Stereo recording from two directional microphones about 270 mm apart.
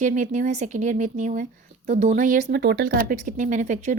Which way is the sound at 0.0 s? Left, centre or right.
Right.